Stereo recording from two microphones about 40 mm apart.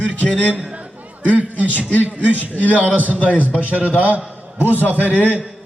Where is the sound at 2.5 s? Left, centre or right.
Left.